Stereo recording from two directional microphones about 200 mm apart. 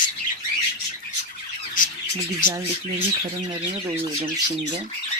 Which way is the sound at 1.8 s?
40° left (ahead or behind).